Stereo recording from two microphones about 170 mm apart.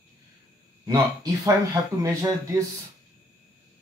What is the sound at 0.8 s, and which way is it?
Speech, 20° right (ahead or behind).